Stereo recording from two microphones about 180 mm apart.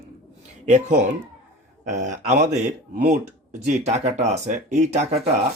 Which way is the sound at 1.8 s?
40° right (ahead or behind).